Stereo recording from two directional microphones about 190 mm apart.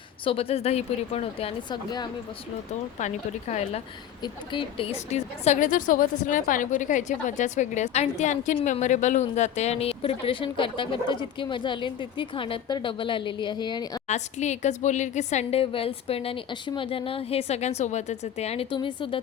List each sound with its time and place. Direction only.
0.3 s a woman's voice: 30° left (ahead or behind)
3.5 s a woman's voice: 35° left (ahead or behind)
14.1 s a woman's voice: 35° left (ahead or behind)